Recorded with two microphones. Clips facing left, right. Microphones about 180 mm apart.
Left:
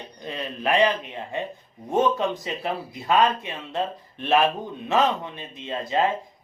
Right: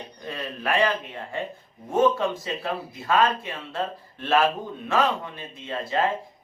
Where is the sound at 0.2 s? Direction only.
20° left (ahead or behind).